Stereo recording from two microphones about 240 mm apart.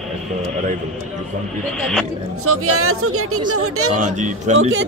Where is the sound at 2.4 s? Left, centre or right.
Right.